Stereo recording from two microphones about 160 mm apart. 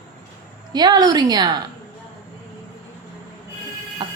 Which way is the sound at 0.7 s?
25° right (ahead or behind).